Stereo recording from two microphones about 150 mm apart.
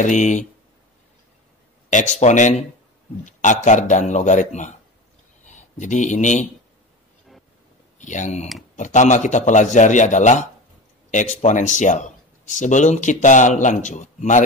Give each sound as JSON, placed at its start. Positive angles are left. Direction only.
{"t": 0.0, "sound": "speech", "side_deg": 55}
{"t": 1.9, "sound": "speech", "side_deg": 55}
{"t": 8.0, "sound": "speech", "side_deg": 55}